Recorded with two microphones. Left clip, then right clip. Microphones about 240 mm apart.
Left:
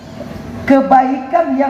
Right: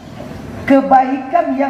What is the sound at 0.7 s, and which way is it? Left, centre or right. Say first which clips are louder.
A man's voice: left 1 dB; left.